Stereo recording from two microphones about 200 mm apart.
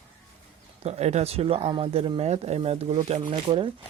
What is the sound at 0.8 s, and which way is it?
Speech, 30° right (ahead or behind).